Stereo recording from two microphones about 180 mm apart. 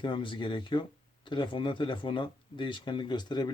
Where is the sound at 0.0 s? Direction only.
25° left (ahead or behind).